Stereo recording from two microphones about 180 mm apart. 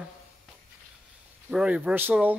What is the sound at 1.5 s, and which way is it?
Speech, 5° right (ahead or behind).